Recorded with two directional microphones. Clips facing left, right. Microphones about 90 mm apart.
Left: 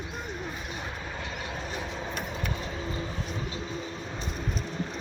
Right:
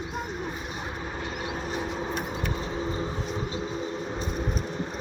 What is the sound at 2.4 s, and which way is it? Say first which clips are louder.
Train: right 4 dB; 30° right (ahead or behind).